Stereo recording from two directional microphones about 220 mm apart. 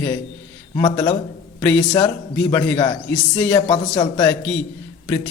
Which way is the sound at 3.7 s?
25° left (ahead or behind).